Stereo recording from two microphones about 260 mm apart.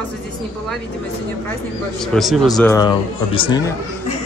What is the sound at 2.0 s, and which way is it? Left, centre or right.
Speech, centre.